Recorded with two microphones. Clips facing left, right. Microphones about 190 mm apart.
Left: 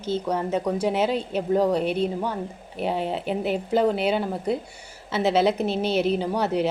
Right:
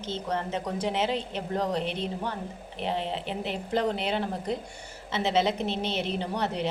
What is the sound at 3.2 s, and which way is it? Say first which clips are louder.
A woman's voice: left 7 dB; 5° left (ahead or behind).